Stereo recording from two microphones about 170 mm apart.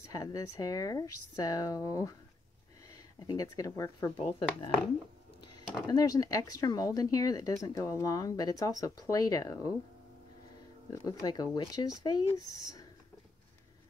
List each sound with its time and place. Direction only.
0.1 s speech: 20° left (ahead or behind)
3.2 s speech: 20° left (ahead or behind)
4.2 s speech: 30° left (ahead or behind)
5.9 s speech: 20° left (ahead or behind)
10.9 s speech: 20° left (ahead or behind)